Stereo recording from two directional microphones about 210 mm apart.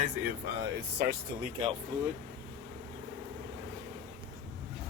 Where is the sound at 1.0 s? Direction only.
45° right (ahead or behind).